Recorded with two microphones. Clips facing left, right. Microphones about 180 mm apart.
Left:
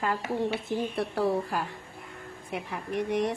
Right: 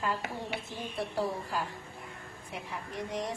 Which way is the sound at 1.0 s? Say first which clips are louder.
Left 4 dB; 65° left (ahead or behind).